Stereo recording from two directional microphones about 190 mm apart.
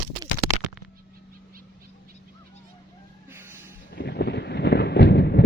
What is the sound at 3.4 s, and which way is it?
Music, 10° right (ahead or behind).